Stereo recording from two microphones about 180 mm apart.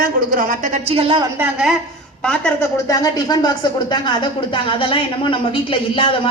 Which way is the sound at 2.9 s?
20° left (ahead or behind).